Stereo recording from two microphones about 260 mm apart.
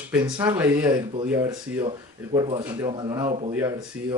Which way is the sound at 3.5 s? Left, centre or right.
Centre.